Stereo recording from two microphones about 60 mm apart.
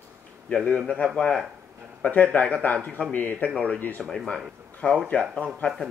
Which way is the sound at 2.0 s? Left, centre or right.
Left.